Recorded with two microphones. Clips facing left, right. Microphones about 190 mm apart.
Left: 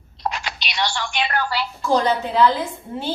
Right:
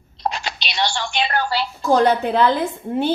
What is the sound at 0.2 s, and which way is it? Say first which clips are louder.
Telephone: right 2 dB; 30° right (ahead or behind).